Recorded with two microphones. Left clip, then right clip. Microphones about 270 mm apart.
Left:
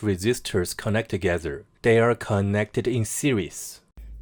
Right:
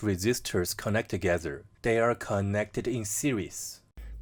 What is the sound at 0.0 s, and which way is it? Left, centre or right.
Speech, centre.